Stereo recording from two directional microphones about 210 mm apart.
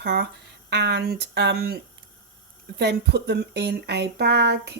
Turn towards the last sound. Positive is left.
turn(degrees=-55)  # may be behind; listen again after turning